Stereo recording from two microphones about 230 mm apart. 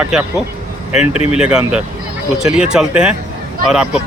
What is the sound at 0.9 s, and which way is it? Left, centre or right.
Speech, left.